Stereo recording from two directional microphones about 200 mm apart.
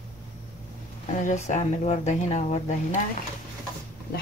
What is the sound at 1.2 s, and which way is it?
Speech, 35° left (ahead or behind).